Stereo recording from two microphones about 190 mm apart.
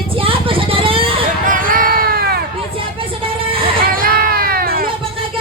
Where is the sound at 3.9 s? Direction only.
50° right (ahead or behind).